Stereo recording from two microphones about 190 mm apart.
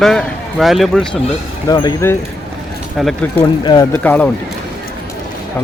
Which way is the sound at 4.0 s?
10° left (ahead or behind).